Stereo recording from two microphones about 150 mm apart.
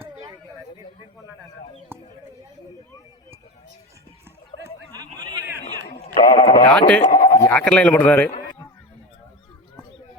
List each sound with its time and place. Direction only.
5.1 s a sound: 25° right (ahead or behind)
6.2 s speech: 25° left (ahead or behind)
6.7 s speech: 10° left (ahead or behind)
7.0 s speech: 60° left (ahead or behind)
7.3 s sheep: 20° left (ahead or behind)
7.5 s speech: 5° left (ahead or behind)